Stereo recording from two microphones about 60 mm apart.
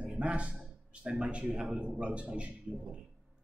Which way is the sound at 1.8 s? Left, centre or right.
Centre.